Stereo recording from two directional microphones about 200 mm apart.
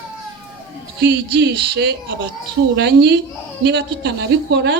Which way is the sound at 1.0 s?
55° right (ahead or behind).